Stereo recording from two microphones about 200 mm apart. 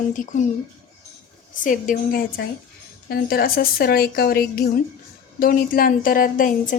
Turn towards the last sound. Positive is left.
turn(degrees=45)  # may be behind; listen again after turning